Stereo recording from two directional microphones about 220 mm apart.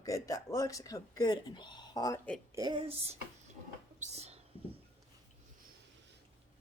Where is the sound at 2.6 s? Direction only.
20° right (ahead or behind).